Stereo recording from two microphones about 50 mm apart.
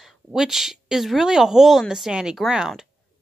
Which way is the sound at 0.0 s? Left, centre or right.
Centre.